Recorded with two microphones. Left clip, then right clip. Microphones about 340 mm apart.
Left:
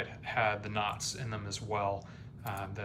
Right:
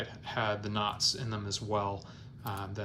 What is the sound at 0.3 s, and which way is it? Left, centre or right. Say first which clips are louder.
Speech: left 1 dB; centre.